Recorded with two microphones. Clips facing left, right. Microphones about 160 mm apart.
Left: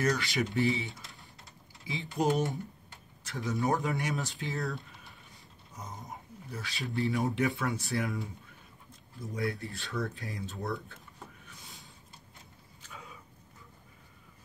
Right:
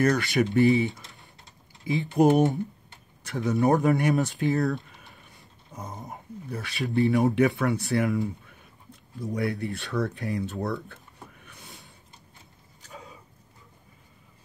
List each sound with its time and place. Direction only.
0.0 s speech: 50° right (ahead or behind)
1.9 s speech: 55° right (ahead or behind)
3.3 s speech: 70° right (ahead or behind)
3.8 s speech: 60° right (ahead or behind)
5.8 s a sound: 60° right (ahead or behind)
6.9 s speech: 70° right (ahead or behind)
9.2 s speech: 70° right (ahead or behind)
11.4 s a sound: 65° right (ahead or behind)
12.8 s a sound: 35° right (ahead or behind)